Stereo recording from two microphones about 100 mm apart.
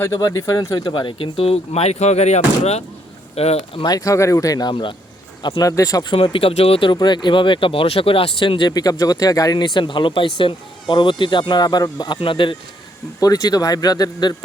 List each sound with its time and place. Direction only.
0.0 s speech: 35° left (ahead or behind); by 3.8 s 90° left
3.8 s speech: 35° left (ahead or behind)
4.7 s speech: 55° left (ahead or behind)
5.5 s speech: 35° left (ahead or behind)
6.1 s speech: 55° left (ahead or behind)
8.7 s speech: 40° left (ahead or behind)
9.7 s speech: 55° left (ahead or behind)
13.1 s speech: 40° left (ahead or behind)